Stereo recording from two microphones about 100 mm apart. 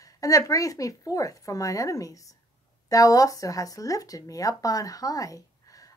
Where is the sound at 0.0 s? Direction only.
35° left (ahead or behind).